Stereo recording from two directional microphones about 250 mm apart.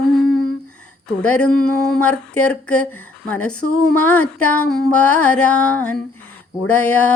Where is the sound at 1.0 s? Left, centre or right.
Centre.